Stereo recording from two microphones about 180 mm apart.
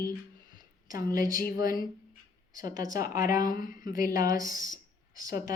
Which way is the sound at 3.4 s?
50° left (ahead or behind).